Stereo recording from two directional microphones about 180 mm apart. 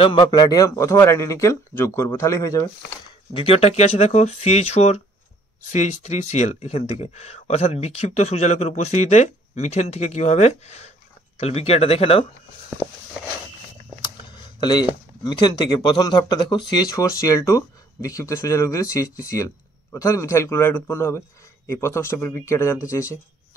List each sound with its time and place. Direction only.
0.0 s speech: 25° left (ahead or behind)
3.3 s speech: 35° left (ahead or behind)
14.3 s speech: 25° left (ahead or behind)